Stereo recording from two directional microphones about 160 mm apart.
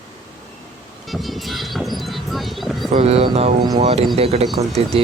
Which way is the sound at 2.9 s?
40° right (ahead or behind).